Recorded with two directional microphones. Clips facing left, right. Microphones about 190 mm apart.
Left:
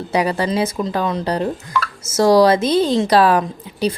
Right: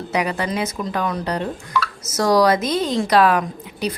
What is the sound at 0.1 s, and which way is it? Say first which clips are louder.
A woman's voice: left 4 dB; 30° left (ahead or behind).